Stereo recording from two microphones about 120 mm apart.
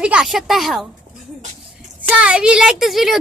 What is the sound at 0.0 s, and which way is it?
Speech, 5° right (ahead or behind).